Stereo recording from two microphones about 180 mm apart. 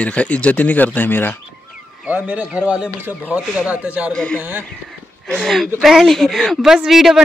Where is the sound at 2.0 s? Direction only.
10° right (ahead or behind).